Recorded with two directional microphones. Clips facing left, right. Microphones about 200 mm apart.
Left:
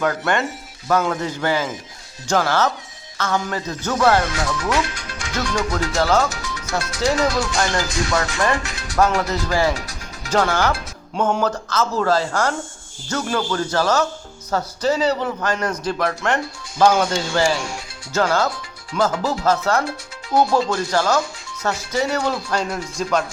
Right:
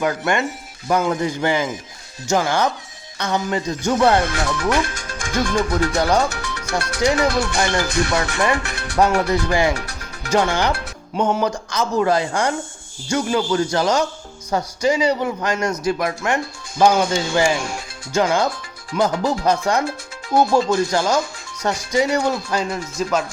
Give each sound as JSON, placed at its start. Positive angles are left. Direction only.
{"t": 0.0, "sound": "a man's voice", "side_deg": -10}
{"t": 4.3, "sound": "speech", "side_deg": -60}
{"t": 6.0, "sound": "a man's voice", "side_deg": -15}
{"t": 6.3, "sound": "music", "side_deg": -65}
{"t": 7.2, "sound": "speech", "side_deg": -60}
{"t": 8.5, "sound": "music", "side_deg": -60}
{"t": 9.2, "sound": "speech", "side_deg": -60}
{"t": 9.5, "sound": "a man's voice", "side_deg": -15}
{"t": 9.7, "sound": "speech", "side_deg": -65}
{"t": 10.3, "sound": "a man's voice", "side_deg": -15}